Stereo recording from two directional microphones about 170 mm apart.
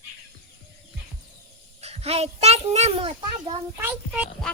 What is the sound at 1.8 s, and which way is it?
A child's voice, 35° right (ahead or behind).